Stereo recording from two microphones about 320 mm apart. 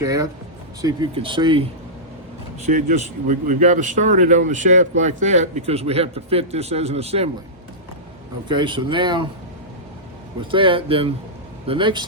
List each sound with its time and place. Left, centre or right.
0.0 s speech: centre
2.6 s speech: right
8.4 s speech: centre
10.5 s speech: centre